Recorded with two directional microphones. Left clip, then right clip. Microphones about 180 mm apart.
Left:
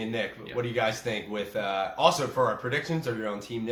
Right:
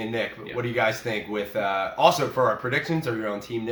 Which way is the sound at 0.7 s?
20° right (ahead or behind).